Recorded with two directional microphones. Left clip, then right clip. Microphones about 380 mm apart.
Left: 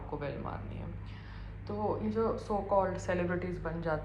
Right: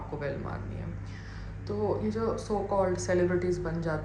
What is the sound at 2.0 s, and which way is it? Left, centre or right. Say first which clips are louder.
A woman's voice: right 2 dB; centre.